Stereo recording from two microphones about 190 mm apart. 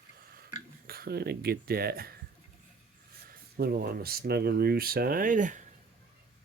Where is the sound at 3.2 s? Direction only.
50° right (ahead or behind).